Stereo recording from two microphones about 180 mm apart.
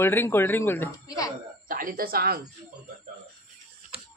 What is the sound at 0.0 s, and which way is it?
Speech, 10° left (ahead or behind).